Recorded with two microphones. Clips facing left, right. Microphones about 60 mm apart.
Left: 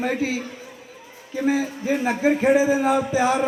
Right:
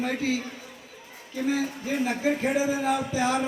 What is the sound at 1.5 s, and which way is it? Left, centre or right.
A man's voice, centre.